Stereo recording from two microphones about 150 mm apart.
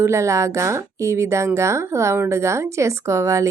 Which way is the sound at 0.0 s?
20° right (ahead or behind).